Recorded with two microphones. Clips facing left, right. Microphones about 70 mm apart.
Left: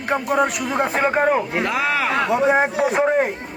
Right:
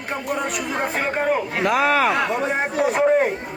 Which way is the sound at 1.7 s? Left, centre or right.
Right.